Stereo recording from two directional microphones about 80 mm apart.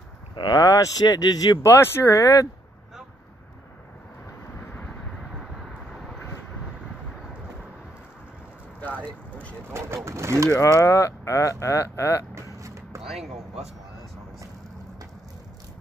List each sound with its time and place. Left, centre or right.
0.4 s speech: left
0.7 s speech: left
1.6 s speech: left
8.8 s vehicle: centre
9.7 s vehicle: right
10.0 s bird: right
10.5 s speech: left
12.5 s vehicle: right
13.0 s speech: centre